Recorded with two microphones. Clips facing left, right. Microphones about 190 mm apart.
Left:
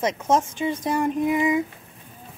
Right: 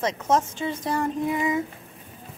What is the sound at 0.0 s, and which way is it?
Speech, 15° left (ahead or behind).